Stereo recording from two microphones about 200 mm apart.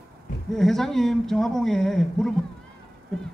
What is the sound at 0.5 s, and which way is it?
Speech, centre (ahead or behind).